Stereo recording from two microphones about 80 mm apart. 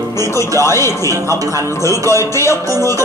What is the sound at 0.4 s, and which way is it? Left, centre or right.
Speech, left.